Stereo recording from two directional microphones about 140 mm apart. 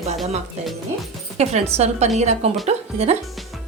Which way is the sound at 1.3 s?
50° right (ahead or behind).